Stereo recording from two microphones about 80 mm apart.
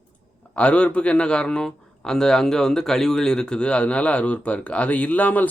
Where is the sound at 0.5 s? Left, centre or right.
Centre.